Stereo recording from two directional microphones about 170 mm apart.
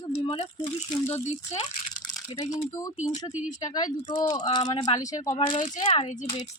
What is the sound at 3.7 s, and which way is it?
Speech, 25° left (ahead or behind).